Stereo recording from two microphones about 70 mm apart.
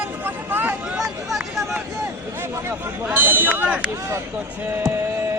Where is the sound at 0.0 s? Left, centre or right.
Right.